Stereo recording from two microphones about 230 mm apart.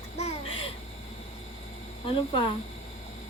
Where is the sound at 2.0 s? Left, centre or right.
Left.